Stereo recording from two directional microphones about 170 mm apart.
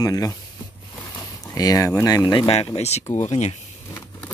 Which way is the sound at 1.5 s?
20° left (ahead or behind).